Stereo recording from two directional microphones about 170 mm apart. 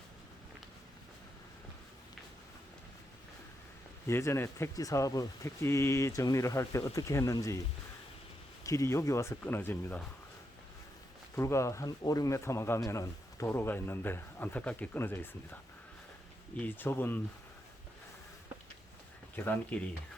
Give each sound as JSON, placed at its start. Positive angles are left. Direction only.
{"t": 4.0, "sound": "speech", "side_deg": 15}
{"t": 8.6, "sound": "speech", "side_deg": 20}
{"t": 11.3, "sound": "speech", "side_deg": 15}
{"t": 16.6, "sound": "speech", "side_deg": 10}
{"t": 19.4, "sound": "speech", "side_deg": 10}